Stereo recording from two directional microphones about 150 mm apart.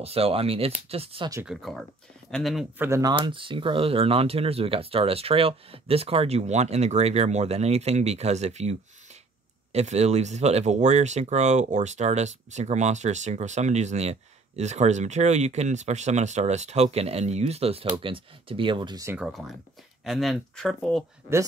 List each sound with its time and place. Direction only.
0.0 s speech: 40° right (ahead or behind)
1.4 s speech: centre (ahead or behind)
2.8 s speech: 20° right (ahead or behind)
19.1 s speech: centre (ahead or behind)